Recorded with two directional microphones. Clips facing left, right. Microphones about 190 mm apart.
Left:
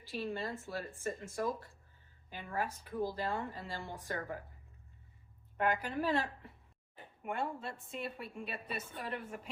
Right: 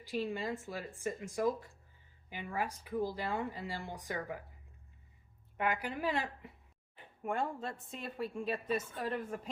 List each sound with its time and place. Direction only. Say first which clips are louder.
0.0 s speech: right 2 dB; 15° right (ahead or behind)
5.5 s speech: left 2 dB; 10° right (ahead or behind)
7.6 s a woman's voice: even; 40° right (ahead or behind)